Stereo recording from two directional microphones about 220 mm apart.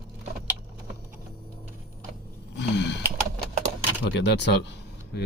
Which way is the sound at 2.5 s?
50° left (ahead or behind).